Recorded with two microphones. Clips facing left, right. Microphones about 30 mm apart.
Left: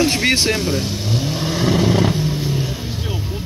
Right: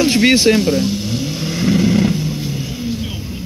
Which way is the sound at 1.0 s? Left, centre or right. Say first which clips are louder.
Even; left.